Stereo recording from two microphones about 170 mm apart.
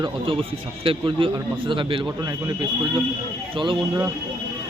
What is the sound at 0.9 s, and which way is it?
Speech, 30° right (ahead or behind).